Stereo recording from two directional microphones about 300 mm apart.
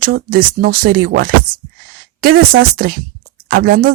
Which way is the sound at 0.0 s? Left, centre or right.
Right.